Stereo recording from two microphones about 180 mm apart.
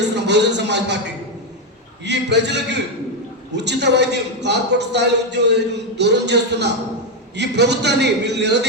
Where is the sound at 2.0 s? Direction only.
75° right (ahead or behind).